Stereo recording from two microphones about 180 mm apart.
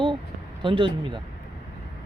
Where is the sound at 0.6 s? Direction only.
30° right (ahead or behind).